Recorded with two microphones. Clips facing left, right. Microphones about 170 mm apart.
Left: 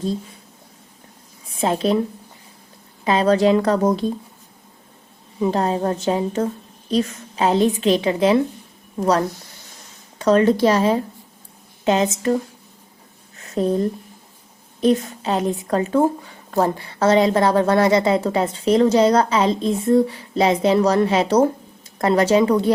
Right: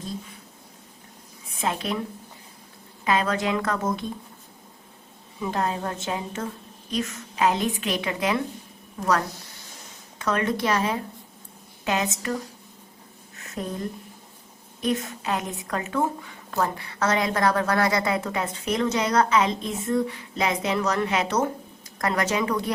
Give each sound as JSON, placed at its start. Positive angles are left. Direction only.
{"t": 1.6, "sound": "a woman's voice", "side_deg": 30}
{"t": 3.0, "sound": "a woman's voice", "side_deg": 30}
{"t": 5.4, "sound": "a woman's voice", "side_deg": 30}
{"t": 13.4, "sound": "a sound", "side_deg": 30}
{"t": 14.8, "sound": "a woman's voice", "side_deg": 30}